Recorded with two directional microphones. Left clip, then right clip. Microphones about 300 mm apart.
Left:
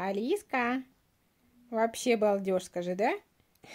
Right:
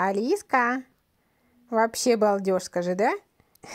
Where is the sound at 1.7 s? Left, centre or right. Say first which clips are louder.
Right 6 dB; centre.